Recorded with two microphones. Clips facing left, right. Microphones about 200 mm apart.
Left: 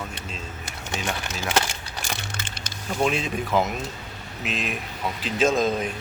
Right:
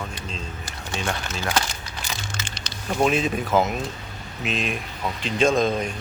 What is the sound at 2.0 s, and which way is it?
Music, 55° left (ahead or behind).